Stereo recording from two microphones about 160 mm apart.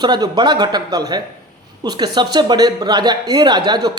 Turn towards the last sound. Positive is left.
turn(degrees=-25)  # may be behind; listen again after turning